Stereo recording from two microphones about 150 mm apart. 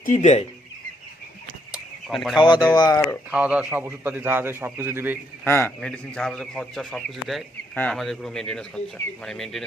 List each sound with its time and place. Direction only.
0.0 s speech: 50° left (ahead or behind)
1.7 s a sound: centre (ahead or behind)
2.4 s speech: 30° left (ahead or behind)
3.3 s a man's voice: 10° right (ahead or behind)
5.5 s a man's voice: 15° left (ahead or behind)